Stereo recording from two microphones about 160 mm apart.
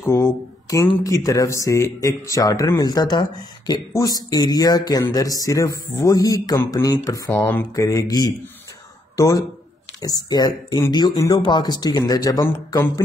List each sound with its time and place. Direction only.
0.0 s speech: 15° left (ahead or behind)